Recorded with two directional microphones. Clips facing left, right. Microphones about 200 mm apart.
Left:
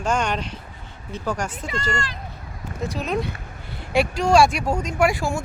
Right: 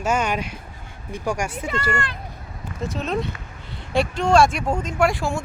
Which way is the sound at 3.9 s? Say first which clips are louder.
Even; 10° left (ahead or behind).